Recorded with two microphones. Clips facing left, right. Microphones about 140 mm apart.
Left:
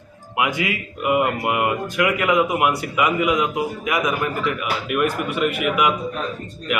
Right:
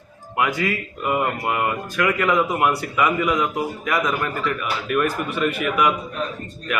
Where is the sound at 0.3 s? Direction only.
15° left (ahead or behind).